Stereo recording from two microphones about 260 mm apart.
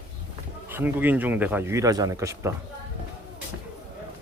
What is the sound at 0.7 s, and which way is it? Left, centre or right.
Speech, centre.